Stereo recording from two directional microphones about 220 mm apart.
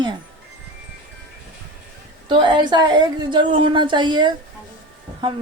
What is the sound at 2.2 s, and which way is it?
A woman's voice, 20° right (ahead or behind).